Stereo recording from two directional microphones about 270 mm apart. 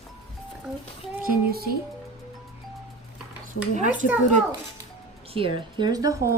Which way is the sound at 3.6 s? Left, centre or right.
Left.